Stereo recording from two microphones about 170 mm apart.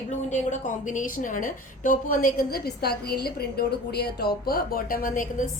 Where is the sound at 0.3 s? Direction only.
45° left (ahead or behind).